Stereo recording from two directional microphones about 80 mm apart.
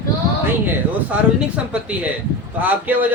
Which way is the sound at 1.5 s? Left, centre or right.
Centre.